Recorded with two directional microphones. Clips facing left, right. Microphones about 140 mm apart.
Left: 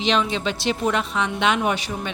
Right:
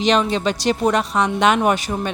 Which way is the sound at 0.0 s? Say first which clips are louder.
Right 4 dB; 45° right (ahead or behind).